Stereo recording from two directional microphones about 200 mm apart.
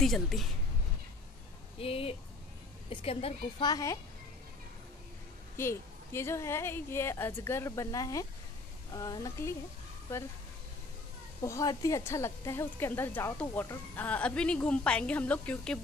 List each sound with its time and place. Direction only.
0.0 s speech: centre (ahead or behind)
1.8 s a woman's voice: 30° left (ahead or behind)
5.6 s a woman's voice: 15° left (ahead or behind)
11.4 s a woman's voice: 15° left (ahead or behind)